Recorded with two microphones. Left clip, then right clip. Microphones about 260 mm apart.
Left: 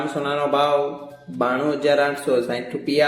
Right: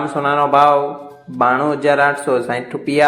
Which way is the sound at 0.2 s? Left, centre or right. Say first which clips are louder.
Right 8 dB; centre.